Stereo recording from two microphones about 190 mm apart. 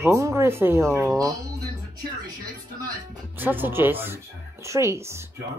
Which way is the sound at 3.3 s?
10° right (ahead or behind).